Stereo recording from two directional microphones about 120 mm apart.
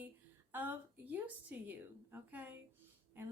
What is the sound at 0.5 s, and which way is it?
A woman's voice, 15° right (ahead or behind).